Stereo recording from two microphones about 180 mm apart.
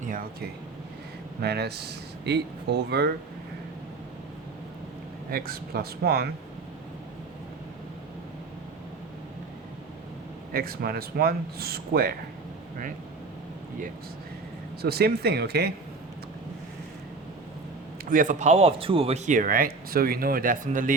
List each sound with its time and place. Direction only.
0.1 s speech: 50° right (ahead or behind)
1.4 s speech: 65° right (ahead or behind)
5.3 s speech: 55° right (ahead or behind)
10.5 s speech: 55° right (ahead or behind)
14.8 s speech: 60° right (ahead or behind)
18.1 s speech: 45° right (ahead or behind)